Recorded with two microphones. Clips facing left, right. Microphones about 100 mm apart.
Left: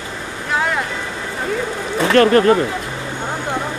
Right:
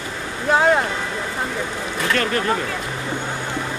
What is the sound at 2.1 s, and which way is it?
Speech, 50° left (ahead or behind).